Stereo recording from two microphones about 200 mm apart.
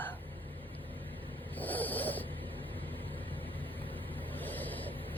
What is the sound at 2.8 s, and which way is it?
Vehicle, 10° left (ahead or behind).